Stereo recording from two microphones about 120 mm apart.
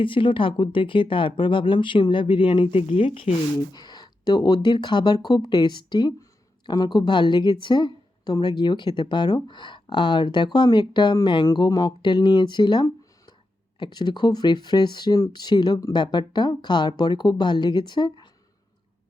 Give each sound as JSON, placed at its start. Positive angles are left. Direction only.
{"t": 0.0, "sound": "speech", "side_deg": 45}
{"t": 3.7, "sound": "speech", "side_deg": 35}